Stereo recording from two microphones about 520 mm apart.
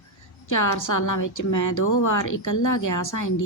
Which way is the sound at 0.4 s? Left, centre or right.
Left.